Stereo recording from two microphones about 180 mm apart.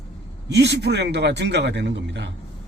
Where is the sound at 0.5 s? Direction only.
70° right (ahead or behind).